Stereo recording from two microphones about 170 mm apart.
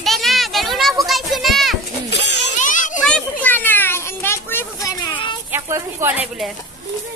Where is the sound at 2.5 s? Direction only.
50° left (ahead or behind).